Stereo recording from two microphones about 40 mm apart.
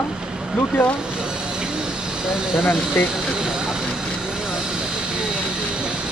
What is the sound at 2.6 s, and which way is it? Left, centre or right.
Speech, left.